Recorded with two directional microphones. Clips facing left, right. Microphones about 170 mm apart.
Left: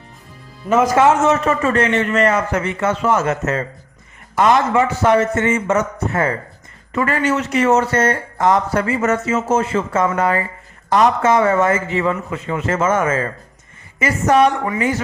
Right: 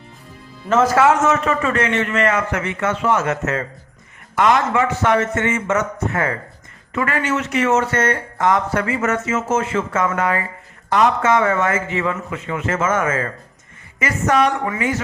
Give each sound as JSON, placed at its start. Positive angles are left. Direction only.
{"t": 0.7, "sound": "a man's voice", "side_deg": 15}
{"t": 1.0, "sound": "a man's voice", "side_deg": 30}